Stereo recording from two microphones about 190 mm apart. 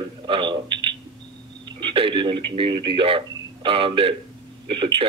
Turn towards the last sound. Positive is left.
turn(degrees=-25)  # may be behind; listen again after turning